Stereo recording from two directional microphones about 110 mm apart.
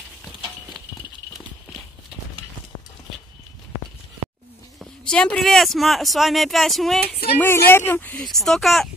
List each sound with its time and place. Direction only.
5.0 s speech: 10° left (ahead or behind)
7.3 s speech: 20° left (ahead or behind)
8.2 s speech: centre (ahead or behind)